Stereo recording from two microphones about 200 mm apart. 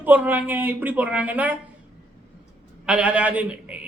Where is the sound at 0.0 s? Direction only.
10° right (ahead or behind).